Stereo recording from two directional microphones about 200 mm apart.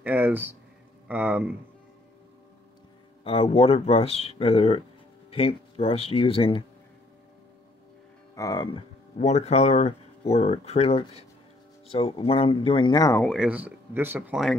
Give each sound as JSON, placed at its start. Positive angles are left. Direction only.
{"t": 0.0, "sound": "speech", "side_deg": -10}
{"t": 3.3, "sound": "speech", "side_deg": 30}
{"t": 8.4, "sound": "speech", "side_deg": 20}
{"t": 9.2, "sound": "speech", "side_deg": 35}
{"t": 13.2, "sound": "speech", "side_deg": 0}